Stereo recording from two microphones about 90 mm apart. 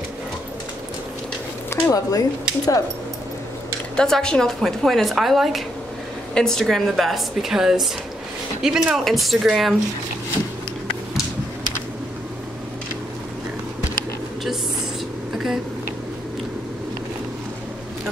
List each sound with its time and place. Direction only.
1.7 s speech: 40° left (ahead or behind)
3.9 s a woman's voice: 10° left (ahead or behind)
15.3 s a sound: 5° right (ahead or behind)